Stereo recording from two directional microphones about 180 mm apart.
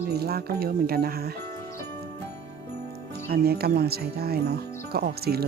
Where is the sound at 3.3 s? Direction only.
60° right (ahead or behind).